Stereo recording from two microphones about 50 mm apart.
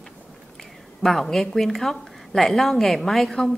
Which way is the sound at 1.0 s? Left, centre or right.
Centre.